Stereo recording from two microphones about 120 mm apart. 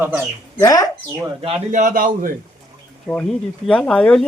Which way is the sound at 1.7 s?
90° right.